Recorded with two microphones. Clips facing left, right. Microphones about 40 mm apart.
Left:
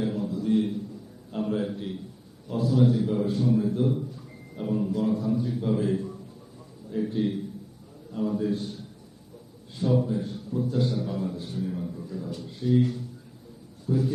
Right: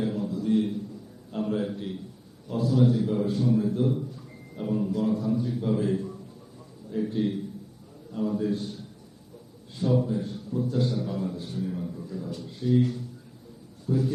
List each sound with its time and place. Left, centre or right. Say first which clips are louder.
0.0 s a sound: even; centre
2.5 s a man's voice: even; centre
9.7 s a man's voice: even; centre